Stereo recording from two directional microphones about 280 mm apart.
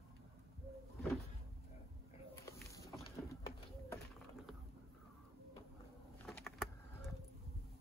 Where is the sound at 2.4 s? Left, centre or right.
Centre.